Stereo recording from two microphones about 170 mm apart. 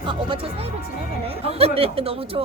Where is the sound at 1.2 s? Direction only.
35° right (ahead or behind).